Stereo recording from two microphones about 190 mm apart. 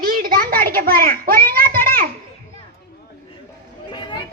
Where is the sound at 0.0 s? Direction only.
50° right (ahead or behind).